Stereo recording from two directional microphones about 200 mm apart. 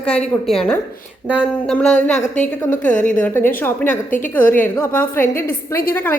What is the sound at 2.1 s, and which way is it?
Speech, 35° left (ahead or behind).